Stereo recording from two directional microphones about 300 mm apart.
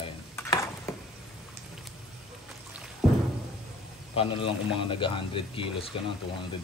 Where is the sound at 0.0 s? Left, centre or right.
Centre.